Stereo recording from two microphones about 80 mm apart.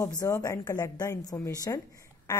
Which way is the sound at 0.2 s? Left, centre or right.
Left.